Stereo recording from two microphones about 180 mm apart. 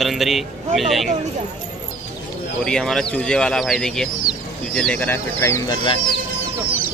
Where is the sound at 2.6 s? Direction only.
5° left (ahead or behind).